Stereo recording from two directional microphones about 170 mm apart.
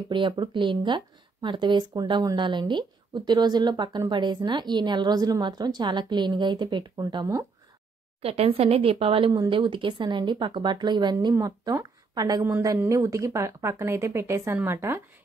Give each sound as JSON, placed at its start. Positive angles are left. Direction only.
{"t": 0.1, "sound": "speech", "side_deg": -25}
{"t": 8.2, "sound": "speech", "side_deg": -35}